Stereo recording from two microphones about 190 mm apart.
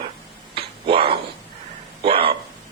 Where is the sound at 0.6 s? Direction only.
30° right (ahead or behind).